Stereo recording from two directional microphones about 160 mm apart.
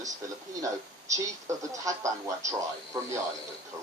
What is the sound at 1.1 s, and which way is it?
Speech, 20° right (ahead or behind).